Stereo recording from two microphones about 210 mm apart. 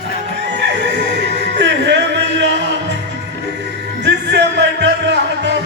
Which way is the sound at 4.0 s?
55° right (ahead or behind).